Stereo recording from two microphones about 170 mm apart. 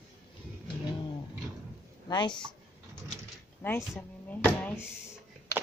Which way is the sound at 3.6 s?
10° left (ahead or behind).